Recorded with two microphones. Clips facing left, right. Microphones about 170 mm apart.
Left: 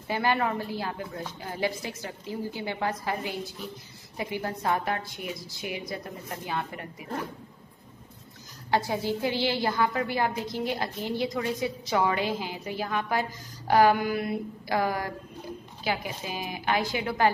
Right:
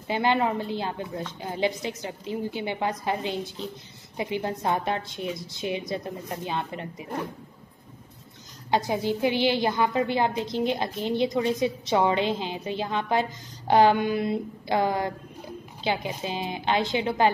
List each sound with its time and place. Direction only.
0.1 s a woman's voice: 20° right (ahead or behind)
8.6 s a woman's voice: 20° right (ahead or behind)